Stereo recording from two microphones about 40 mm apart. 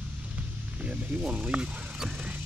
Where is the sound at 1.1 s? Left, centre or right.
Right.